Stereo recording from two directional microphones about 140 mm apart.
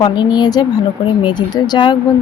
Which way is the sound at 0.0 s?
30° left (ahead or behind).